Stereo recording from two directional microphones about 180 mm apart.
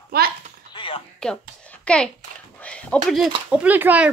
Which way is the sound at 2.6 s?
5° left (ahead or behind).